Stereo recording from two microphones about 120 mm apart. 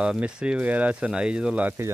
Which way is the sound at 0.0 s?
10° right (ahead or behind).